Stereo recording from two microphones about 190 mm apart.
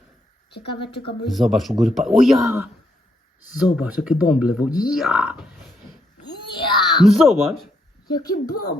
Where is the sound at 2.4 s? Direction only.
15° right (ahead or behind).